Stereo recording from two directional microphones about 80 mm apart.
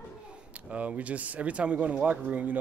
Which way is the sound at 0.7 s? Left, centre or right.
Centre.